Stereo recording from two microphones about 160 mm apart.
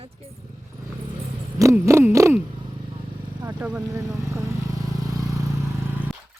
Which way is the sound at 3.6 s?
10° right (ahead or behind).